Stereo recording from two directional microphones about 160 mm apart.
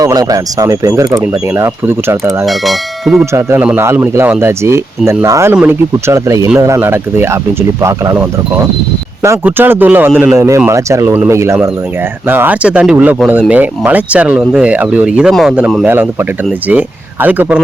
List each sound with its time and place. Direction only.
0.0 s speech: 20° right (ahead or behind)
2.5 s speech: centre (ahead or behind)
3.3 s speech: 10° right (ahead or behind)
9.2 s speech: 15° right (ahead or behind)